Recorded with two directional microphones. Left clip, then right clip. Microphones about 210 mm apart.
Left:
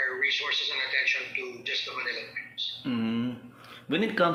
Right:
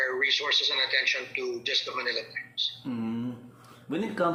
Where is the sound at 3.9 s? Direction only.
10° left (ahead or behind).